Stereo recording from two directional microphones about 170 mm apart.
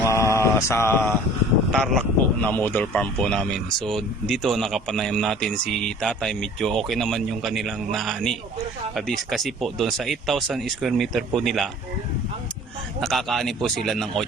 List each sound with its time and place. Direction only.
0.1 s mantra: 15° left (ahead or behind)
1.7 s speech: centre (ahead or behind)
13.0 s speech: centre (ahead or behind)